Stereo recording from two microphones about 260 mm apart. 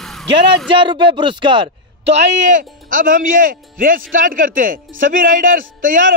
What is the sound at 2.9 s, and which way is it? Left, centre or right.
A man's voice, right.